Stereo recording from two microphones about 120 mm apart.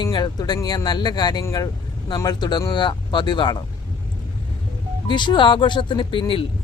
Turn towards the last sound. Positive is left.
turn(degrees=45)  # may be behind; listen again after turning